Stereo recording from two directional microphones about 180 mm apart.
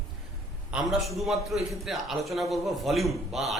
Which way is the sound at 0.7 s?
Centre (ahead or behind).